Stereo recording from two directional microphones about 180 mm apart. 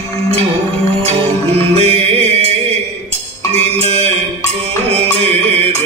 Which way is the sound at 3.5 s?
35° right (ahead or behind).